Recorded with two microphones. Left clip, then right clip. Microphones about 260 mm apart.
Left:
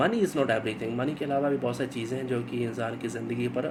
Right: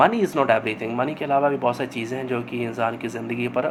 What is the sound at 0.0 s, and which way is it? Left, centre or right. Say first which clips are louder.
Speech: right 7 dB; centre.